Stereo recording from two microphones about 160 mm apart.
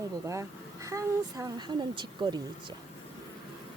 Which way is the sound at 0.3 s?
20° right (ahead or behind).